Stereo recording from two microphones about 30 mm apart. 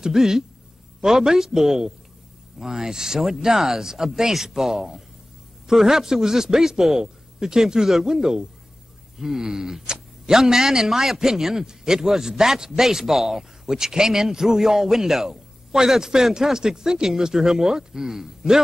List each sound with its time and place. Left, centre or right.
0.0 s speech: centre